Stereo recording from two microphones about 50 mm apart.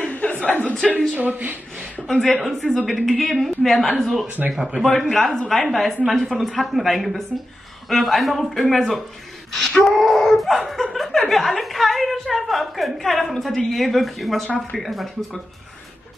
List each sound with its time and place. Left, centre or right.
0.0 s a sound: left
1.1 s a woman's voice: right
2.0 s a woman's voice: centre
4.5 s speech: centre
5.1 s a woman's voice: centre
9.5 s wail: centre
9.8 s a woman's voice: centre